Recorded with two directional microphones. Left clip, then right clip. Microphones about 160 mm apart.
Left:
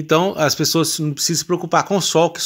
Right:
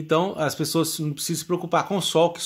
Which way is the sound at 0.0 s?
30° left (ahead or behind).